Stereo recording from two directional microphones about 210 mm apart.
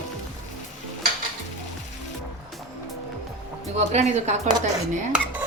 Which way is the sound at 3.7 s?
35° right (ahead or behind).